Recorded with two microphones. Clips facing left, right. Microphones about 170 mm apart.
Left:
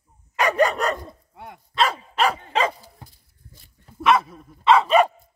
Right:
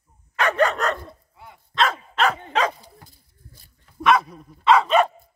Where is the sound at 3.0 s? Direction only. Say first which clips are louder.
Left 3 dB; 20° left (ahead or behind).